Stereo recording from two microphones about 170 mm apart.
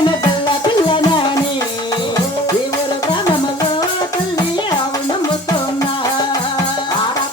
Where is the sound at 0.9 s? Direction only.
30° left (ahead or behind).